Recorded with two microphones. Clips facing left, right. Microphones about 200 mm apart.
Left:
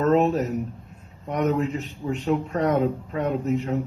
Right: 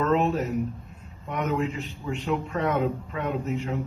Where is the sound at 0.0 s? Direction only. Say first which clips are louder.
Left 4 dB; 40° left (ahead or behind).